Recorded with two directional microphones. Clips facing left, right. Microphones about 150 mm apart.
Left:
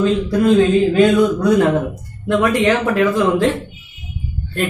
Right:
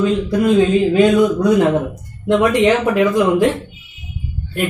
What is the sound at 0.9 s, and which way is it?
A man's voice, 15° right (ahead or behind).